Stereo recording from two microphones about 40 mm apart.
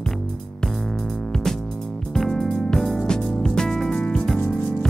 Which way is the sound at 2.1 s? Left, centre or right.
Centre.